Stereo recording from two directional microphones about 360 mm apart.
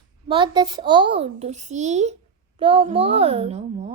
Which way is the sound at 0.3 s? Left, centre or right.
Centre.